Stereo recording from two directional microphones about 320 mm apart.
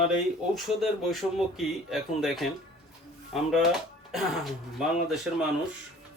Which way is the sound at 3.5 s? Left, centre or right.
Centre.